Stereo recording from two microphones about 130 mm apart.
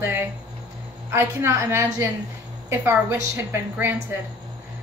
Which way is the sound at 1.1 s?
20° right (ahead or behind).